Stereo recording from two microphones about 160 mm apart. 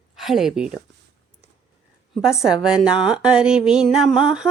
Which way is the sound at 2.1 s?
5° right (ahead or behind).